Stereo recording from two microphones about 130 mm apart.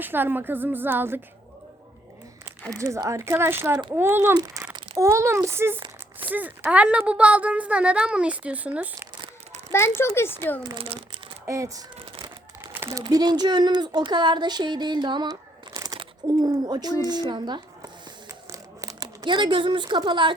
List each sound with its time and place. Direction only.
0.0 s speech: 15° right (ahead or behind)
2.4 s speech: 25° right (ahead or behind)
4.4 s crumpling: 25° right (ahead or behind)
4.9 s speech: 20° right (ahead or behind)
9.7 s speech: 20° left (ahead or behind)
10.6 s speech: 35° right (ahead or behind)
10.8 s a sound: 45° right (ahead or behind)
11.4 s speech: 25° right (ahead or behind)
16.2 s zipper: 30° right (ahead or behind)
19.0 s speech: 35° right (ahead or behind)